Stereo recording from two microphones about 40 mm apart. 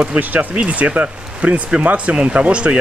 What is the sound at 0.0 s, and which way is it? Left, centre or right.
Speech, right.